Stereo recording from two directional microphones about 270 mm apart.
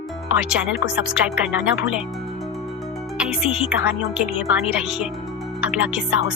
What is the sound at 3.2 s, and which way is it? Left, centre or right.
Speech, centre.